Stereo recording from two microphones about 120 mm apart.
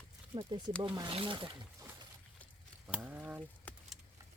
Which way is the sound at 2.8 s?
10° right (ahead or behind).